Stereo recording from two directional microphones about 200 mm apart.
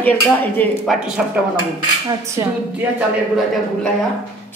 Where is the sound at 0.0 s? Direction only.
10° left (ahead or behind).